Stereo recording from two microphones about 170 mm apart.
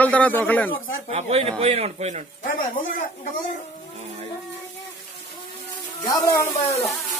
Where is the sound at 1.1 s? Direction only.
35° right (ahead or behind).